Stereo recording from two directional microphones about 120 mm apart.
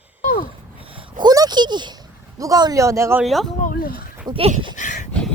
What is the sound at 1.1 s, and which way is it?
Speech, 35° right (ahead or behind).